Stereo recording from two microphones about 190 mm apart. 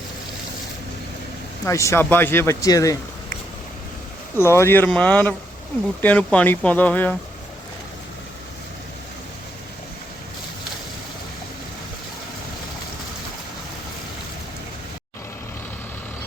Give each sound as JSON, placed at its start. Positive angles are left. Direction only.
{"t": 1.6, "sound": "speech", "side_deg": 15}
{"t": 4.4, "sound": "speech", "side_deg": 15}